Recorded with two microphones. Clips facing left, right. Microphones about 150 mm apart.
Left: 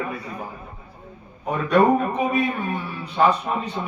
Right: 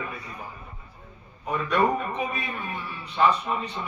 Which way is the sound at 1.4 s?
40° left (ahead or behind).